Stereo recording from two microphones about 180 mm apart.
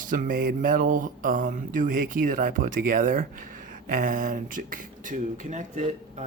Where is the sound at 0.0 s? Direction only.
50° right (ahead or behind).